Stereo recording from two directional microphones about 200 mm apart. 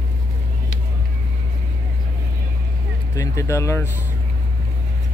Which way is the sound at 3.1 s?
15° left (ahead or behind).